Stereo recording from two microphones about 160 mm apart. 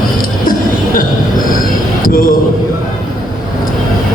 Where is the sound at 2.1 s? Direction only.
60° left (ahead or behind).